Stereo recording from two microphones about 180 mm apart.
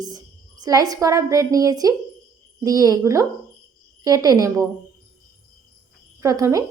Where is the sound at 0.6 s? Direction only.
20° right (ahead or behind).